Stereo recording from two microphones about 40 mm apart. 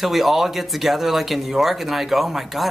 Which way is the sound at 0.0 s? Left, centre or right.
Centre.